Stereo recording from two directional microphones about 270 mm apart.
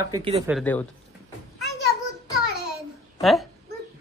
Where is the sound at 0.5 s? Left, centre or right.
Centre.